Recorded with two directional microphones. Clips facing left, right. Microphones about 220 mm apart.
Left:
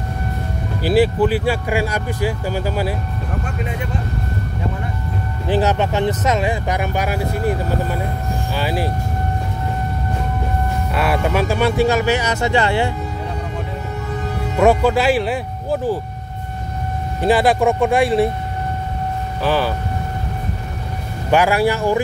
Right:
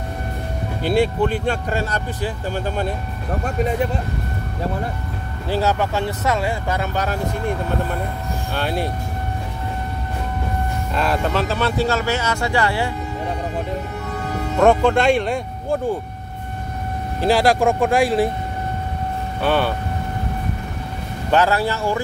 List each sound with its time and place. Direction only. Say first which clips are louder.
0.8 s speech: left 3 dB; 5° left (ahead or behind)
5.5 s speech: left 3 dB; 20° left (ahead or behind); by 8.9 s 5° left (ahead or behind)
11.0 s speech: left 2 dB; 10° left (ahead or behind)
14.6 s speech: left 1 dB; 5° left (ahead or behind)
17.2 s speech: left 1 dB; centre (ahead or behind)
19.4 s speech: even; centre (ahead or behind)
21.3 s speech: left 3 dB; 10° left (ahead or behind)